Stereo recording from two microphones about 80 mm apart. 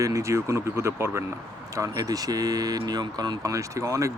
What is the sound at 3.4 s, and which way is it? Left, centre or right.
Speech, right.